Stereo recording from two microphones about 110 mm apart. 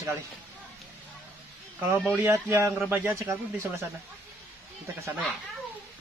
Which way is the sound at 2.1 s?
20° right (ahead or behind).